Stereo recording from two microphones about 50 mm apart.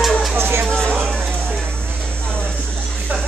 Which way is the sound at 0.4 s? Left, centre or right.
Right.